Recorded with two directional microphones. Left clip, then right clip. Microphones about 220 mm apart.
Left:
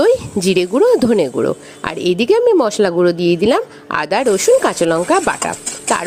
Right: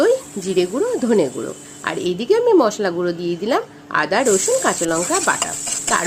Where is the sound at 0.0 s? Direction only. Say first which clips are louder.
Left 4 dB; 40° left (ahead or behind).